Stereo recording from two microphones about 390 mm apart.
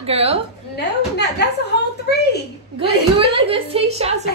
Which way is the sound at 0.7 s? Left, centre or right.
Left.